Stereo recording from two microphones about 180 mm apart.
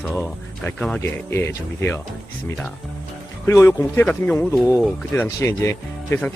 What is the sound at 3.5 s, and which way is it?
Speech, 15° left (ahead or behind).